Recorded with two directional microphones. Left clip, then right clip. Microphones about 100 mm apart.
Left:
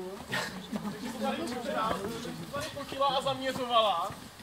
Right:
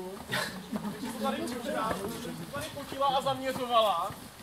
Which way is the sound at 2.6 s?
5° left (ahead or behind).